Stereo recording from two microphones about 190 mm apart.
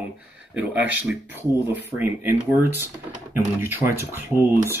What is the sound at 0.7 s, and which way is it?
Speech, 10° right (ahead or behind).